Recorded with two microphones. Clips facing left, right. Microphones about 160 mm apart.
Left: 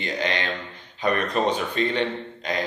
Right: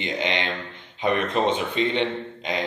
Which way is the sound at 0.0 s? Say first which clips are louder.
Even; 20° right (ahead or behind).